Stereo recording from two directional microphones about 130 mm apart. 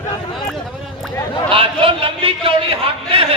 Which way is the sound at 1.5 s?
45° right (ahead or behind).